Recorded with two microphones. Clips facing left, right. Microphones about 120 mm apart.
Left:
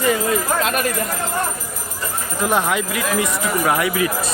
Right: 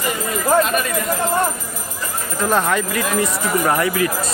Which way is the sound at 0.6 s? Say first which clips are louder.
Even; 70° left (ahead or behind).